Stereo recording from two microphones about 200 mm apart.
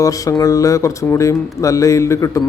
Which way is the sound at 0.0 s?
15° left (ahead or behind).